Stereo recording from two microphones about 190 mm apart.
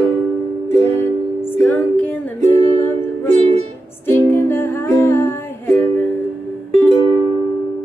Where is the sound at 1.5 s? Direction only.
10° left (ahead or behind).